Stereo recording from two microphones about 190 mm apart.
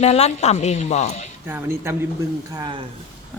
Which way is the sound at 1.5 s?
10° right (ahead or behind).